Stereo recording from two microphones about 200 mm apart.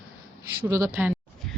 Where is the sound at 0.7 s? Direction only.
15° right (ahead or behind).